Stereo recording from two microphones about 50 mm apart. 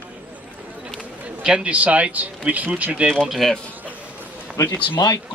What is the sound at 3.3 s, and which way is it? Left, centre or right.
Speech, centre.